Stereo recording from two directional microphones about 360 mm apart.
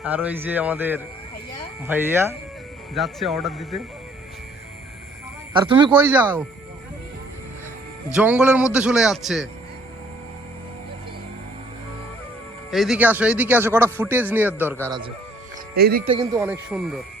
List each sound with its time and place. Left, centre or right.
0.0 s a man's voice: centre
5.6 s speech: centre
8.1 s a man's voice: centre
12.7 s a man's voice: centre
15.7 s speech: right
16.1 s a man's voice: centre